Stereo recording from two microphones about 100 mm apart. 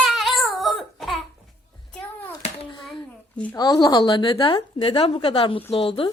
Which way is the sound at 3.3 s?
15° left (ahead or behind).